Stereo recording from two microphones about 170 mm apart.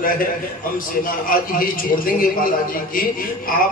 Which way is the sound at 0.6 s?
55° left (ahead or behind).